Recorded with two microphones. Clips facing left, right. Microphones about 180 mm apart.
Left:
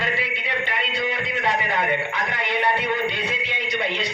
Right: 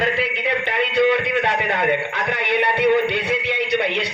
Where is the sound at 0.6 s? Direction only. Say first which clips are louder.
Right 10 dB; 65° right (ahead or behind).